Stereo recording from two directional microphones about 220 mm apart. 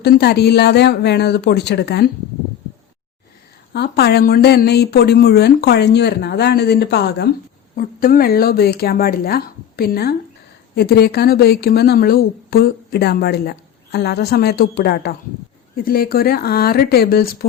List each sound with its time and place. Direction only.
0.0 s a woman's voice: 45° left (ahead or behind)
3.7 s a woman's voice: 45° left (ahead or behind)